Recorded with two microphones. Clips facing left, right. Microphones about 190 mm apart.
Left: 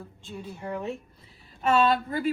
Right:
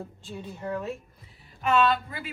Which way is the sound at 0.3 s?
10° left (ahead or behind).